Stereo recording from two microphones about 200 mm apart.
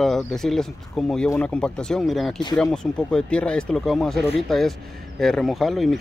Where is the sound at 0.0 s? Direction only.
Centre (ahead or behind).